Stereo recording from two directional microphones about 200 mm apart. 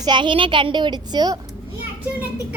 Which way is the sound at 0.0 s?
25° right (ahead or behind).